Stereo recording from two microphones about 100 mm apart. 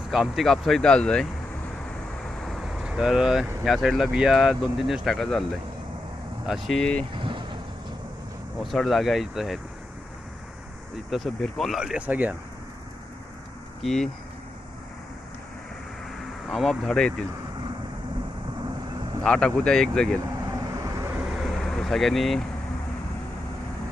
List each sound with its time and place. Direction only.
0.1 s speech: centre (ahead or behind)
2.4 s vehicle: centre (ahead or behind)
3.6 s speech: 5° right (ahead or behind)
7.1 s vehicle: 55° right (ahead or behind)
8.6 s speech: centre (ahead or behind)
11.1 s speech: centre (ahead or behind)
11.8 s speech: 10° right (ahead or behind)
13.8 s speech: 5° left (ahead or behind)
16.5 s speech: 5° left (ahead or behind)
19.2 s speech: 5° left (ahead or behind)
20.5 s vehicle: 30° right (ahead or behind)
21.3 s vehicle: centre (ahead or behind)